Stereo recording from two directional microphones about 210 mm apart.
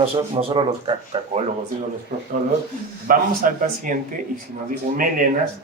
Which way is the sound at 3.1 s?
40° right (ahead or behind).